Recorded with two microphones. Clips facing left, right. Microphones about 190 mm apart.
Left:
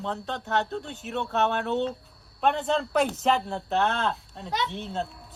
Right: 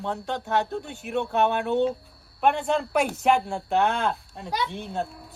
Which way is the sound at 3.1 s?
10° right (ahead or behind).